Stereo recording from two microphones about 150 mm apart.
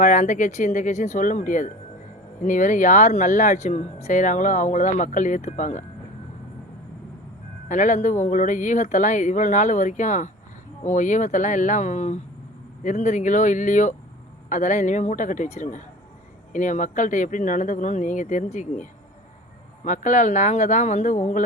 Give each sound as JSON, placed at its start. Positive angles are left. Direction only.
{"t": 0.0, "sound": "speech", "side_deg": 55}
{"t": 7.7, "sound": "speech", "side_deg": 55}